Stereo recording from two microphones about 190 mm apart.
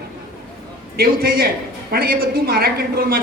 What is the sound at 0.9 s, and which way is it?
A woman's voice, 50° right (ahead or behind).